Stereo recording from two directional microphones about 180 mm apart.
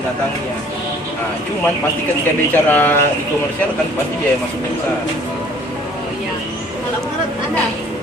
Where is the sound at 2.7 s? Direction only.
10° left (ahead or behind).